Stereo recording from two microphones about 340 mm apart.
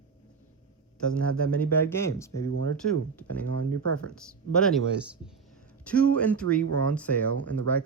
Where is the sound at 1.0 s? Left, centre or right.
Centre.